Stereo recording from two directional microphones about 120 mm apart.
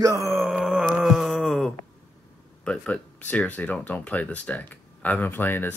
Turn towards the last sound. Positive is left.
turn(degrees=15)  # may be behind; listen again after turning